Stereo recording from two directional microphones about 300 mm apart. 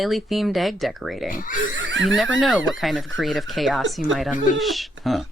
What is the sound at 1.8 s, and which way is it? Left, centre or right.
Speech, right.